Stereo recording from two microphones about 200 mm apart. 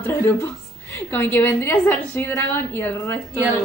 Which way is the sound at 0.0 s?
10° left (ahead or behind).